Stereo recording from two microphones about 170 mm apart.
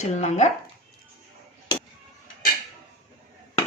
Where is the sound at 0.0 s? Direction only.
40° left (ahead or behind).